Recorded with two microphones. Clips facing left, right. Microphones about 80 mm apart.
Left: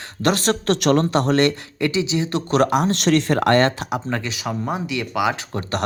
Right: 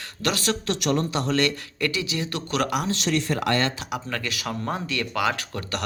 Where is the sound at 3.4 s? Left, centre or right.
Left.